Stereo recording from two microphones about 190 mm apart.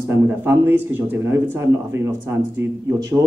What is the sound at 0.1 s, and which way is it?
Speech, 10° right (ahead or behind).